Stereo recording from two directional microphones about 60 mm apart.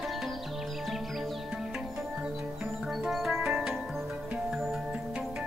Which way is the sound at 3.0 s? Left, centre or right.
Centre.